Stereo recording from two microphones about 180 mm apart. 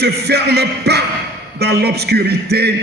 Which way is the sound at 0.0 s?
65° right (ahead or behind).